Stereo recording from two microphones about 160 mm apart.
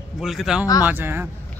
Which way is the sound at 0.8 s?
15° right (ahead or behind).